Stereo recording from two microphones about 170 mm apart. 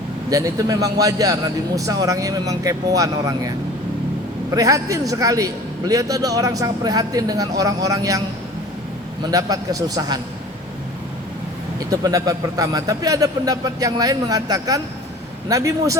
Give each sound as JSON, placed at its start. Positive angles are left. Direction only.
{"t": 0.3, "sound": "a man's voice", "side_deg": -20}
{"t": 4.5, "sound": "a man's voice", "side_deg": -20}
{"t": 9.2, "sound": "a man's voice", "side_deg": -20}
{"t": 11.8, "sound": "a man's voice", "side_deg": -20}